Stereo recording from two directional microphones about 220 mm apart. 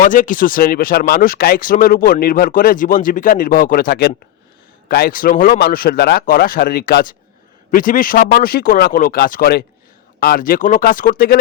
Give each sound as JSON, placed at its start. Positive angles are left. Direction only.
{"t": 0.0, "sound": "speech", "side_deg": 35}